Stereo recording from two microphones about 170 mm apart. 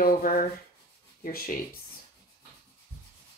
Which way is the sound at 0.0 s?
55° left (ahead or behind).